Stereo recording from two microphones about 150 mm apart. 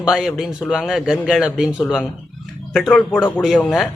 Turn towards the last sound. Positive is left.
turn(degrees=0)  # may be behind; listen again after turning